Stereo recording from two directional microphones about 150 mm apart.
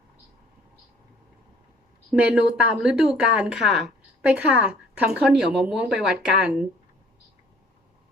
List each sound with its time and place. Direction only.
2.1 s speech: 10° right (ahead or behind)